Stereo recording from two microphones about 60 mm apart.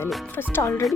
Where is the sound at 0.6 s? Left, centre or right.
Left.